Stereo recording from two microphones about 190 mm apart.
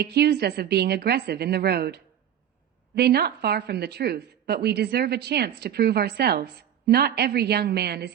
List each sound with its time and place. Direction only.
0.0 s speech: 60° right (ahead or behind)